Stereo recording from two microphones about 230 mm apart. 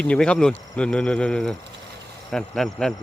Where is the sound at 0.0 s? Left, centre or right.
Centre.